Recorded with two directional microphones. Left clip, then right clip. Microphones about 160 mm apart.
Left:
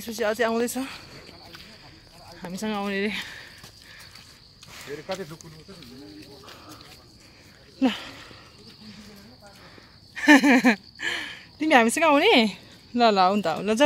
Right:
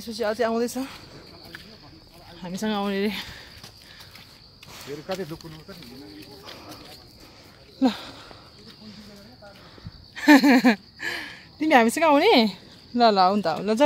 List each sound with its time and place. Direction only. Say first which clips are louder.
0.0 s speech: even; 15° left (ahead or behind)
2.6 s speech: right 2 dB; 20° right (ahead or behind)
7.8 s speech: right 1 dB; 5° right (ahead or behind)
10.1 s speech: even; 10° right (ahead or behind)